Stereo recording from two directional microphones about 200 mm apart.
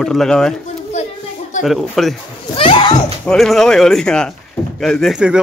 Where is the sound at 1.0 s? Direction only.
35° left (ahead or behind).